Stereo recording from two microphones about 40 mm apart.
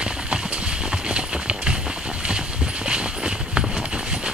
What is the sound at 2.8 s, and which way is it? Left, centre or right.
Train, right.